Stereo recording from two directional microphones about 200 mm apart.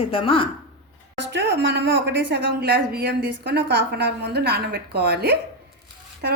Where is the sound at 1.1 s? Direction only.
60° right (ahead or behind).